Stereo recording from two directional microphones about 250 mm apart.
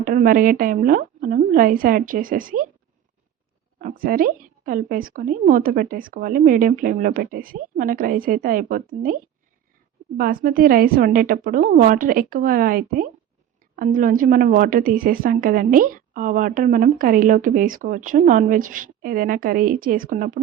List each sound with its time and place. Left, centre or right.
0.0 s a woman's voice: right
3.8 s a woman's voice: right
10.2 s a woman's voice: right